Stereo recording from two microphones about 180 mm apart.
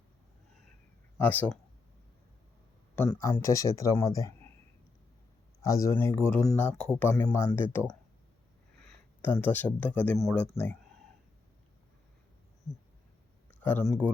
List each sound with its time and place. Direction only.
1.2 s speech: 10° left (ahead or behind)
3.1 s speech: 15° left (ahead or behind)
5.6 s speech: 15° left (ahead or behind)
8.8 s a sound: 5° left (ahead or behind)
9.3 s speech: 10° left (ahead or behind)
13.6 s speech: 10° left (ahead or behind)